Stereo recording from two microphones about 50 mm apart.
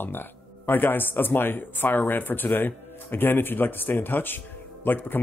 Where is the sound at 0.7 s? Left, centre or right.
Left.